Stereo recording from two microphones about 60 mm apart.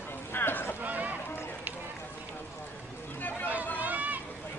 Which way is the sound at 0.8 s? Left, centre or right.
Right.